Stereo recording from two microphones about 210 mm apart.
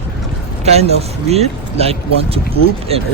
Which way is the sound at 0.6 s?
30° right (ahead or behind).